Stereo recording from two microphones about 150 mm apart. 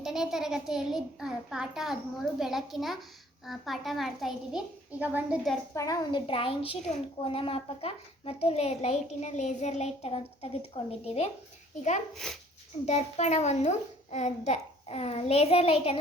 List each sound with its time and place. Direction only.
0.0 s a child's voice: 5° right (ahead or behind)
5.7 s a woman's voice: 25° left (ahead or behind); by 11.3 s 40° left (ahead or behind)
12.1 s a child's voice: centre (ahead or behind)
12.8 s a child's voice: 45° left (ahead or behind)